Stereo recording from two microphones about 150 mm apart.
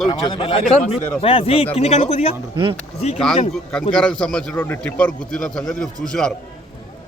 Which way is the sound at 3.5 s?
5° left (ahead or behind).